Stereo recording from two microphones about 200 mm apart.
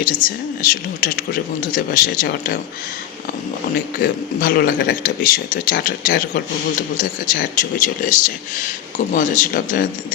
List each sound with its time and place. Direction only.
0.0 s speech: 45° left (ahead or behind)
4.0 s speech: 45° left (ahead or behind)